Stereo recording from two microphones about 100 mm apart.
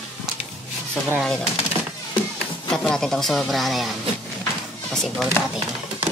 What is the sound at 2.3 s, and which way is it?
Speech, 5° left (ahead or behind).